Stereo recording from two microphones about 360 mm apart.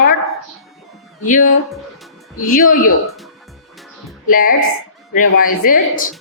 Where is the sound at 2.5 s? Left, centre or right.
Left.